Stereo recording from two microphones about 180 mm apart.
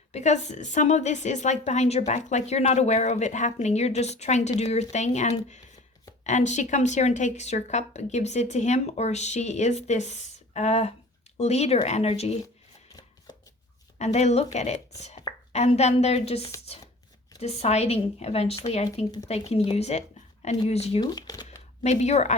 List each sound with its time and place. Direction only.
0.1 s speech: 40° left (ahead or behind)
14.0 s speech: 40° left (ahead or behind)
21.0 s speech: 20° left (ahead or behind)
21.8 s speech: 40° left (ahead or behind)